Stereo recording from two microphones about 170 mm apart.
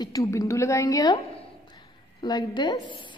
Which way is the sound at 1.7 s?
25° left (ahead or behind).